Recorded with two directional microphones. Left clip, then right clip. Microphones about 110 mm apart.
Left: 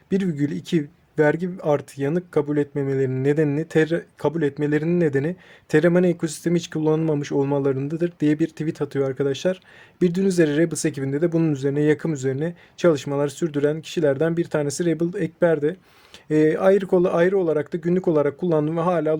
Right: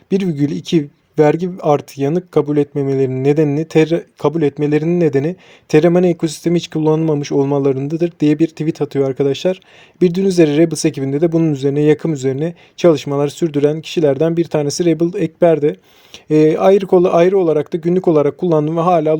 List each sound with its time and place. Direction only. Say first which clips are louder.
0.1 s speech: right 7 dB; 45° right (ahead or behind)